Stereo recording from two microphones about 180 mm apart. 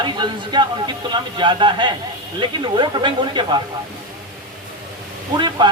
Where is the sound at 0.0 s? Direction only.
25° right (ahead or behind).